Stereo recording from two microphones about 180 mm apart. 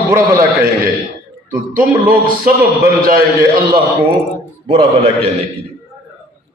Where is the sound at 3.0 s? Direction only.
50° right (ahead or behind).